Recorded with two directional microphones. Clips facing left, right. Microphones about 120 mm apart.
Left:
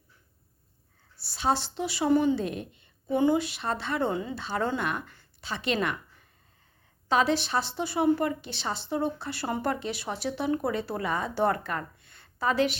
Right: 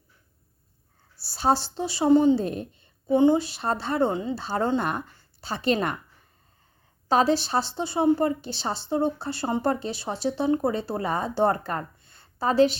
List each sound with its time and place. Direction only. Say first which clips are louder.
1.2 s a woman's voice: right 4 dB; 40° right (ahead or behind)
7.1 s a woman's voice: right 3 dB; 35° right (ahead or behind)